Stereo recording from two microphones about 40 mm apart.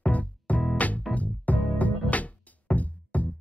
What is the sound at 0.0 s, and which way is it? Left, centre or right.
Music, left.